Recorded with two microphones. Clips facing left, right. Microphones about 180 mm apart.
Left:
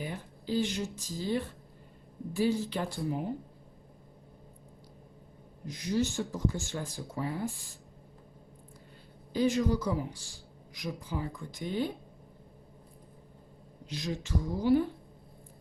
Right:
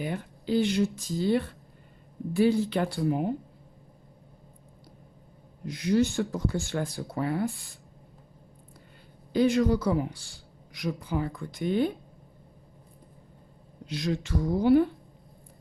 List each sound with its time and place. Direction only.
0.0 s speech: 65° right (ahead or behind)
5.7 s speech: 60° right (ahead or behind)
9.3 s speech: 65° right (ahead or behind)
13.9 s speech: 60° right (ahead or behind)